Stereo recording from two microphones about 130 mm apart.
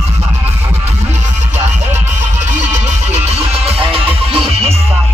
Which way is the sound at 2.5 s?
60° right (ahead or behind).